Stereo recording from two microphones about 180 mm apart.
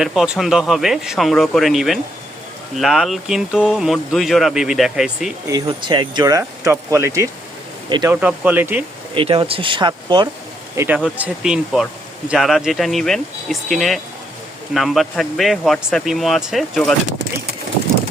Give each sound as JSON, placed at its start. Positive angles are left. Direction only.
{"t": 0.0, "sound": "speech", "side_deg": -5}
{"t": 5.5, "sound": "speech", "side_deg": -25}
{"t": 8.1, "sound": "speech", "side_deg": -10}
{"t": 9.1, "sound": "speech", "side_deg": -30}
{"t": 10.8, "sound": "speech", "side_deg": -5}